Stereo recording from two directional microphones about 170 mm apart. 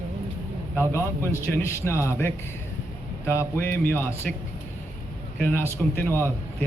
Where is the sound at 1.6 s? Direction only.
15° left (ahead or behind).